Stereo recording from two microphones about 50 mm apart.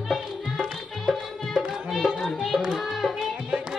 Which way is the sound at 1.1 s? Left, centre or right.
Centre.